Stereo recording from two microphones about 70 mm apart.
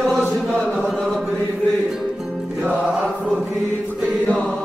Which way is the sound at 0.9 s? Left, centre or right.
Centre.